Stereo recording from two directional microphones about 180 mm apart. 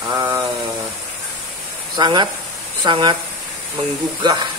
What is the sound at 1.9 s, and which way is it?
Speech, 25° right (ahead or behind).